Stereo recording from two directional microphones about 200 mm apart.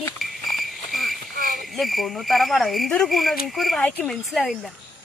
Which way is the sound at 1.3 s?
45° right (ahead or behind).